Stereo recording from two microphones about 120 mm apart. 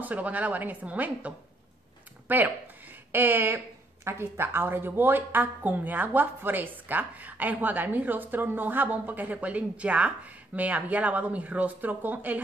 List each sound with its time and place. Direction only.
0.0 s a woman's voice: 10° right (ahead or behind)